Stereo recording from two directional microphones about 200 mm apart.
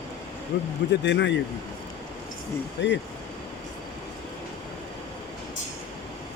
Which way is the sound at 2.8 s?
60° left (ahead or behind).